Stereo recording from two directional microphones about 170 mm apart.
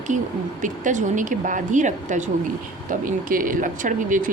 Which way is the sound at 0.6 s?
45° right (ahead or behind).